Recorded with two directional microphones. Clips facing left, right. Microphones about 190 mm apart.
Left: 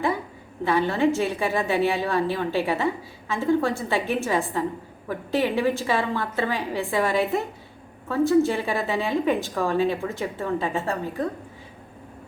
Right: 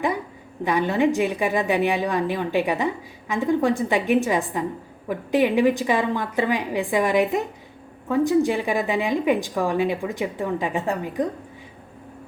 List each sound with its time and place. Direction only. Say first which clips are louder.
0.6 s a woman's voice: right 1 dB; 15° right (ahead or behind)